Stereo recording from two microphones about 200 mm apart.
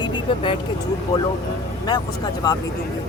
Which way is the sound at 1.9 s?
20° left (ahead or behind).